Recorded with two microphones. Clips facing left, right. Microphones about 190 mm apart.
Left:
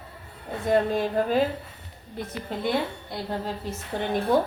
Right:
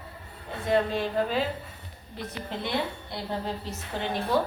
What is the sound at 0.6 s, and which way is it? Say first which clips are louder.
Speech: left 3 dB; 45° left (ahead or behind).